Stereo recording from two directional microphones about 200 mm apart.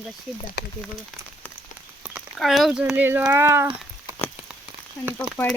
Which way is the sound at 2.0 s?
Centre (ahead or behind).